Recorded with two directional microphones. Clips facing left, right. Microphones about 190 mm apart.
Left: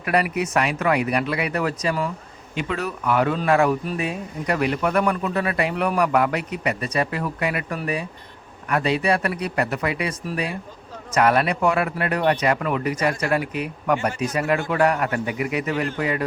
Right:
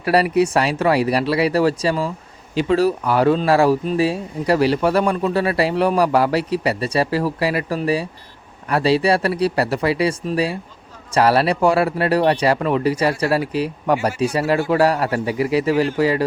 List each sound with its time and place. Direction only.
0.0 s speech: 30° right (ahead or behind)